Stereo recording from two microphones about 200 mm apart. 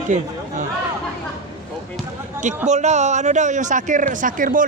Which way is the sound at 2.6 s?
35° right (ahead or behind).